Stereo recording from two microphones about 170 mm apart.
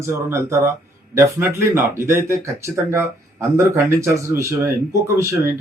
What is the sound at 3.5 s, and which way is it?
Speech, 15° right (ahead or behind).